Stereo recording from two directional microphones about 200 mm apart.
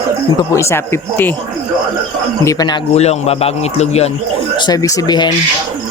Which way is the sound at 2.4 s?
20° left (ahead or behind).